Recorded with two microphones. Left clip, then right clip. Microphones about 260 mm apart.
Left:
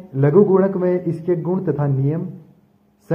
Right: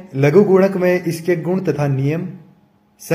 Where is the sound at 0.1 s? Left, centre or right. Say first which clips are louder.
Right 2 dB; right.